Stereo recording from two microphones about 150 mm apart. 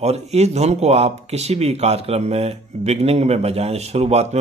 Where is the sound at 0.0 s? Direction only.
45° right (ahead or behind).